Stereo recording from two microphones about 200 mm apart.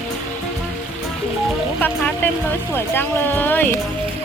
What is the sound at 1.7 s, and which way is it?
Speech, 10° left (ahead or behind).